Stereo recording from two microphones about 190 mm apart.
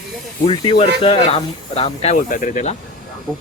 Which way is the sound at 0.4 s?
25° left (ahead or behind).